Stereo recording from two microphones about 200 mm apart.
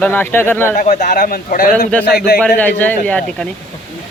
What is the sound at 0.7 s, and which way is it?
Speech, 40° left (ahead or behind).